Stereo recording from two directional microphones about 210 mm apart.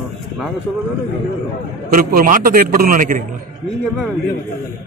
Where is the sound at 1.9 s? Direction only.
45° right (ahead or behind).